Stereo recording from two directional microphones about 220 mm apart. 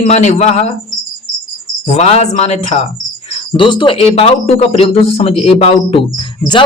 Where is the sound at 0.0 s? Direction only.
30° left (ahead or behind).